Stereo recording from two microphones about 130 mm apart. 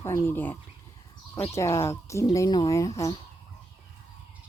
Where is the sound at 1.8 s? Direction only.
20° left (ahead or behind).